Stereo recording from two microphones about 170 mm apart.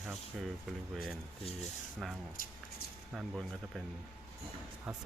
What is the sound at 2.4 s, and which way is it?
Speech, 55° left (ahead or behind).